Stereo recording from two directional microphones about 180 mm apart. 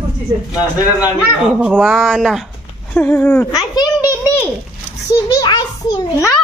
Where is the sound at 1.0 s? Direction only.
10° right (ahead or behind); by 3.6 s 10° left (ahead or behind).